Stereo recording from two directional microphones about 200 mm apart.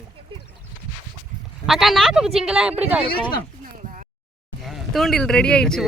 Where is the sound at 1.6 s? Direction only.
Centre (ahead or behind).